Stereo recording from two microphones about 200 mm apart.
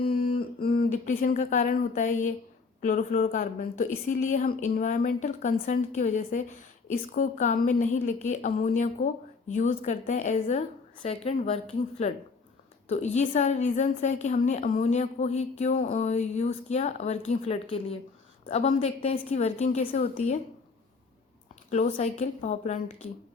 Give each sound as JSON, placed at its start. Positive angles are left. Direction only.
{"t": 0.1, "sound": "a woman's voice", "side_deg": 45}
{"t": 21.7, "sound": "a woman's voice", "side_deg": 35}